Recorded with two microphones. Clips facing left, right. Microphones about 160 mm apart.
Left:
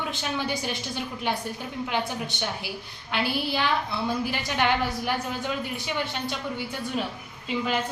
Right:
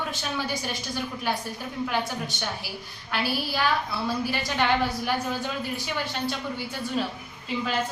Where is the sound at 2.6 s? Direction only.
20° left (ahead or behind).